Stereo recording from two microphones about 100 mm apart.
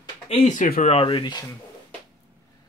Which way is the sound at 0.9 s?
75° left (ahead or behind).